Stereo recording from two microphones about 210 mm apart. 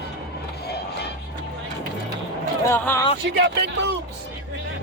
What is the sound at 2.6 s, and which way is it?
Speech, 10° left (ahead or behind).